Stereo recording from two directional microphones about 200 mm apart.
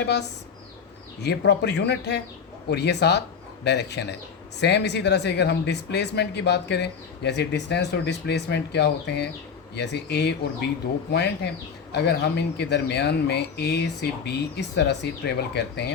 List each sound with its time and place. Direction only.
1.2 s speech: 60° left (ahead or behind)